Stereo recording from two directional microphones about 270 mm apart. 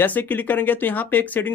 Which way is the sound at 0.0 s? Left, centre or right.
Centre.